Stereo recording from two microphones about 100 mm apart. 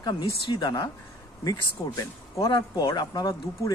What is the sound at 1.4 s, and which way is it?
Speech, 40° left (ahead or behind).